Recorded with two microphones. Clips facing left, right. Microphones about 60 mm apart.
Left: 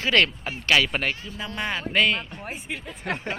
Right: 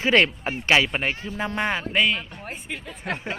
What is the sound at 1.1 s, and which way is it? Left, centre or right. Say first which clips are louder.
Speech: right 4 dB; right.